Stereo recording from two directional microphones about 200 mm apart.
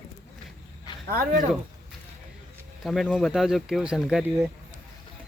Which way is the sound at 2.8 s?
Centre (ahead or behind).